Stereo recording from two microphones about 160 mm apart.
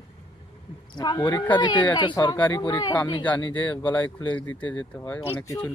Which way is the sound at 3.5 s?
10° left (ahead or behind).